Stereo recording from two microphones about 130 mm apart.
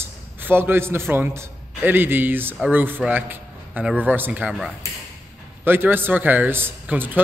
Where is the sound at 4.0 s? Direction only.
15° right (ahead or behind).